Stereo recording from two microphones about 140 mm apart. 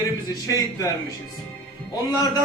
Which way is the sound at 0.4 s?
25° left (ahead or behind).